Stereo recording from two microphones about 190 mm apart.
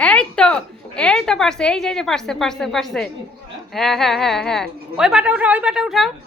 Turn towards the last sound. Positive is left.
turn(degrees=0)  # may be behind; listen again after turning